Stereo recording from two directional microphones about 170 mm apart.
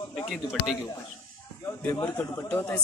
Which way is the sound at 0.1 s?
Centre (ahead or behind).